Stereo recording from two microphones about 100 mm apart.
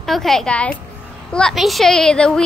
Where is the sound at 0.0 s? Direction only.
Centre (ahead or behind).